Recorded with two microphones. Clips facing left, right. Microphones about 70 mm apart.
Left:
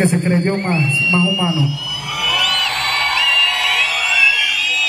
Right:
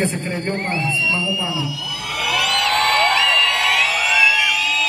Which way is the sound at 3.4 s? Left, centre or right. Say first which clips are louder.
Even; right.